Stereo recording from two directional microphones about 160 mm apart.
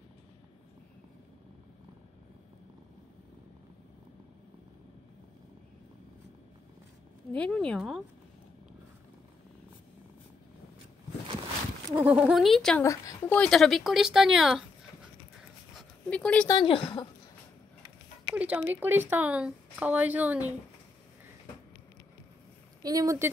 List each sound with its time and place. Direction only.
7.3 s speech: 5° left (ahead or behind)
12.0 s speech: 10° right (ahead or behind)
12.8 s speech: 20° left (ahead or behind)
13.4 s speech: centre (ahead or behind)
16.1 s speech: 5° left (ahead or behind)
16.4 s speech: 30° left (ahead or behind)
18.3 s speech: 10° right (ahead or behind)
22.8 s speech: 20° right (ahead or behind)